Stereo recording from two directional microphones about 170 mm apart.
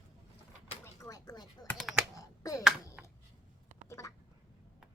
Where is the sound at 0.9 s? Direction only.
20° left (ahead or behind).